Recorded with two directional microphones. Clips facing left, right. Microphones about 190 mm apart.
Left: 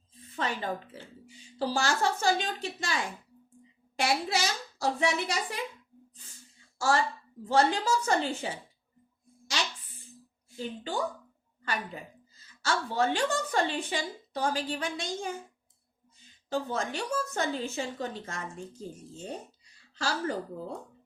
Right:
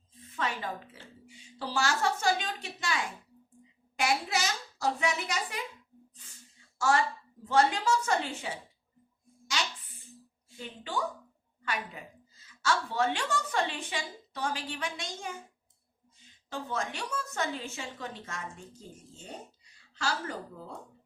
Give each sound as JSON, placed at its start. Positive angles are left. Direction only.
{"t": 0.3, "sound": "a sound", "side_deg": 35}
{"t": 1.5, "sound": "a woman's voice", "side_deg": 35}
{"t": 6.7, "sound": "a woman's voice", "side_deg": 35}
{"t": 10.6, "sound": "a woman's voice", "side_deg": 35}
{"t": 12.6, "sound": "a woman's voice", "side_deg": 35}
{"t": 16.5, "sound": "a woman's voice", "side_deg": 35}
{"t": 20.0, "sound": "a woman's voice", "side_deg": 35}